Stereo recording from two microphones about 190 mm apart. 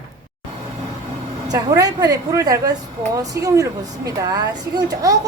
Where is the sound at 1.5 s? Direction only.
20° right (ahead or behind).